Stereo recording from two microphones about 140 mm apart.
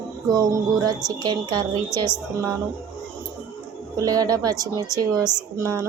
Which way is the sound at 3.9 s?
25° right (ahead or behind).